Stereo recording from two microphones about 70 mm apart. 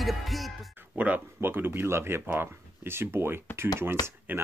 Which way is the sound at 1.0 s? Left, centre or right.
Right.